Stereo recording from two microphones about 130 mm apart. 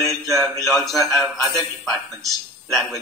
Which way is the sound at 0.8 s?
Centre (ahead or behind).